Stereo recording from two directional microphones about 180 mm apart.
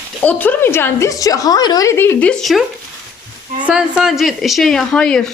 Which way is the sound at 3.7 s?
5° right (ahead or behind).